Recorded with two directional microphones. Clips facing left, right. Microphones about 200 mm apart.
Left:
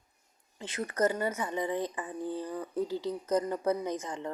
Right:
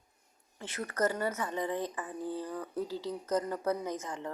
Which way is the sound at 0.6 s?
15° left (ahead or behind).